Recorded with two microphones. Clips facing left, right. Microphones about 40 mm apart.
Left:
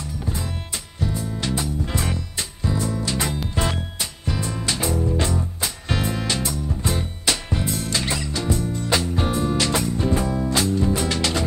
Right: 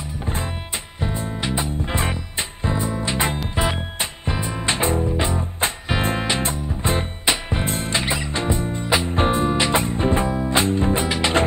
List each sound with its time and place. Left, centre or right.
0.9 s music: right
5.0 s music: right